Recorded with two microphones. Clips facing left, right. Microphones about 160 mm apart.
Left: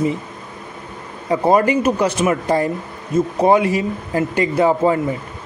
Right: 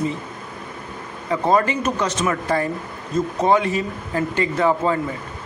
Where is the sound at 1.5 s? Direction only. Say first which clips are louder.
Left 4 dB; 15° left (ahead or behind).